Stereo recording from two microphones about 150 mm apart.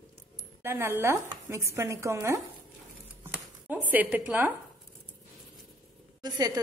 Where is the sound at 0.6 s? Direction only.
15° right (ahead or behind).